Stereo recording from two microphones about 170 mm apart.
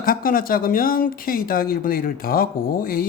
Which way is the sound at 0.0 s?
60° left (ahead or behind).